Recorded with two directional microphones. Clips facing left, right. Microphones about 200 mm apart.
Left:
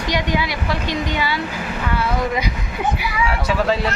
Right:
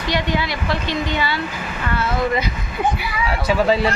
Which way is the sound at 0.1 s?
10° left (ahead or behind).